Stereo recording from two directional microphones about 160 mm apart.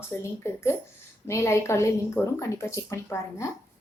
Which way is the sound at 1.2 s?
15° left (ahead or behind).